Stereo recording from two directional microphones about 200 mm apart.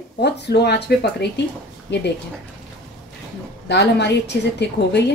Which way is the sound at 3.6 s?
55° left (ahead or behind).